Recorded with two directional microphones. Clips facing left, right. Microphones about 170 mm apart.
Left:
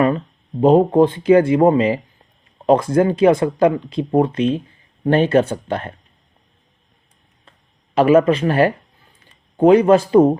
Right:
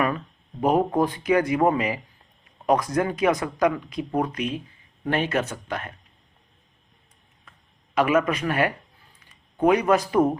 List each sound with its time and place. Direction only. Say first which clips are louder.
0.6 s speech: left 9 dB; 25° left (ahead or behind)
7.5 s a sound: left 3 dB; 30° left (ahead or behind)
7.9 s speech: left 8 dB; 30° left (ahead or behind)